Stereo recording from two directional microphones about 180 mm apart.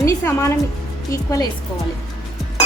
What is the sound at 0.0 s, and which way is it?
A woman's voice, 15° left (ahead or behind).